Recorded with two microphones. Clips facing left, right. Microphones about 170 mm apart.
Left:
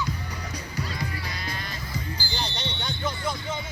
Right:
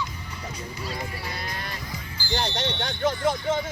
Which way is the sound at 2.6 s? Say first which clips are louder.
Right 5 dB; 90° right.